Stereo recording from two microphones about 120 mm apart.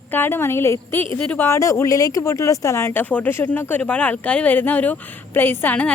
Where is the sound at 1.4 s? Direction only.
25° left (ahead or behind).